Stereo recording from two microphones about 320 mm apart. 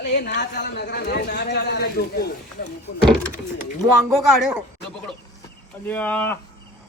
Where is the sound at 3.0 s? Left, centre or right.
Centre.